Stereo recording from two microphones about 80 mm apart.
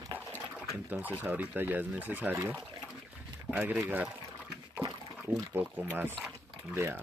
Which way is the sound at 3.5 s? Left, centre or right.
Right.